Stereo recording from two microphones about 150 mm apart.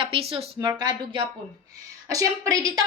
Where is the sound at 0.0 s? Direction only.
40° right (ahead or behind).